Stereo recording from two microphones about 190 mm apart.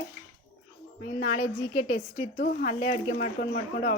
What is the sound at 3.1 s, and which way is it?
Speech, 45° left (ahead or behind).